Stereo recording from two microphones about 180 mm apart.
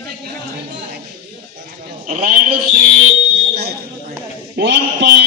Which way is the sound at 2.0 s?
50° right (ahead or behind).